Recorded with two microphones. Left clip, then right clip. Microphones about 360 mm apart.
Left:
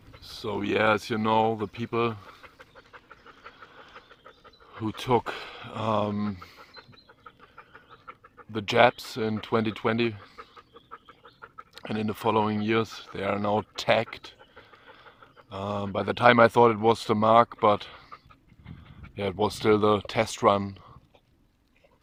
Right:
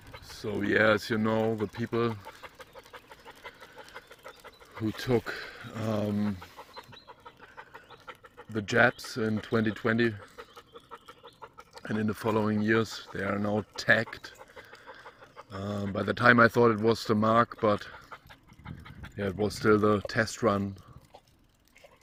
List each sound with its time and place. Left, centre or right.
0.2 s speech: centre
2.4 s pant: centre
4.8 s speech: centre
8.5 s speech: centre
12.0 s speech: centre
13.2 s speech: left
13.7 s speech: centre
15.5 s speech: centre
19.4 s speech: centre